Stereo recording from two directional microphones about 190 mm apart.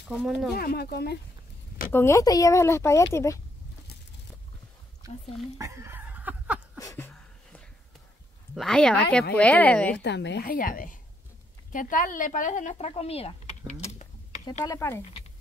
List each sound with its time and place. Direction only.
0.1 s speech: 5° right (ahead or behind)
0.6 s speech: 55° left (ahead or behind)
1.9 s speech: 15° left (ahead or behind)
5.0 s speech: 20° right (ahead or behind)
5.6 s laughter: 15° right (ahead or behind)
6.8 s a sound: 15° left (ahead or behind)
8.5 s speech: 5° left (ahead or behind)
9.9 s a woman's voice: 65° left (ahead or behind); by 14.0 s 35° left (ahead or behind)
14.6 s speech: 15° left (ahead or behind)